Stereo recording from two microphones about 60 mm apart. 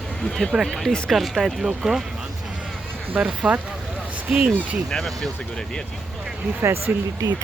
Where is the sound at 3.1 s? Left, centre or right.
Centre.